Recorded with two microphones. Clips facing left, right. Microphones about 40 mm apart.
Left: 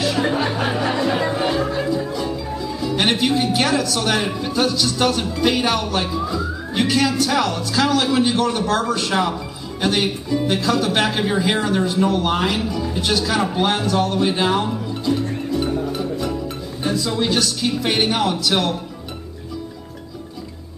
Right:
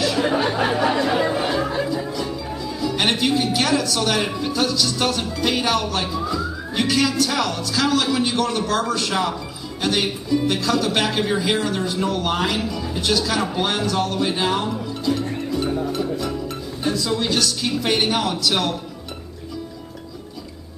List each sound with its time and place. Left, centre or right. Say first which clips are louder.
0.0 s music: even; centre
2.1 s speech: left 2 dB; centre
16.0 s music: left 1 dB; centre
16.8 s speech: left 1 dB; centre